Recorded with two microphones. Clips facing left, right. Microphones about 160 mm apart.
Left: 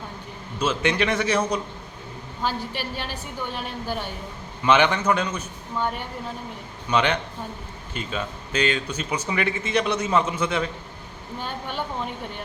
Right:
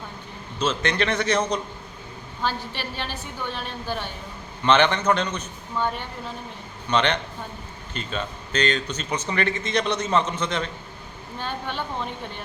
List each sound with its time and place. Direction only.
0.6 s speech: 10° left (ahead or behind)